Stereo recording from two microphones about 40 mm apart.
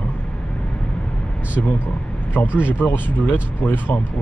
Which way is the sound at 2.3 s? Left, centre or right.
Left.